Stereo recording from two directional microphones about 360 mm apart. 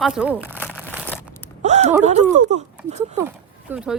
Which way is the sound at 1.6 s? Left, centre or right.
Centre.